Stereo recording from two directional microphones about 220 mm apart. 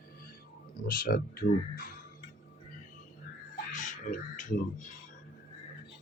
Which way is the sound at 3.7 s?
35° left (ahead or behind).